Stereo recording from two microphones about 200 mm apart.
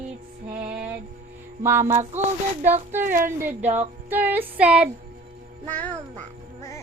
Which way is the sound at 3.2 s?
10° right (ahead or behind).